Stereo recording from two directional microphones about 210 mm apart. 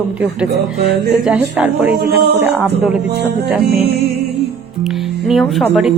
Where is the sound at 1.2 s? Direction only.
5° right (ahead or behind).